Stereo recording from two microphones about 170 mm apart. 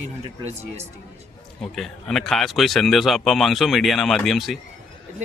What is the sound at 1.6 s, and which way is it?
Speech, 5° left (ahead or behind).